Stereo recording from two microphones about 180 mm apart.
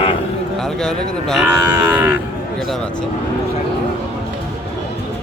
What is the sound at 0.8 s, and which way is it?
Speech, centre (ahead or behind).